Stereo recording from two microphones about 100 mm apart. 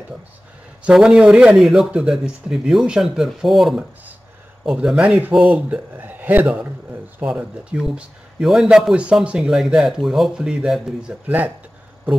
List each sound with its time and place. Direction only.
0.8 s speech: 5° right (ahead or behind)